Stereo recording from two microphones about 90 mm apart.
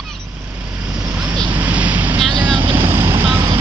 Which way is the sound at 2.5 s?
65° right (ahead or behind).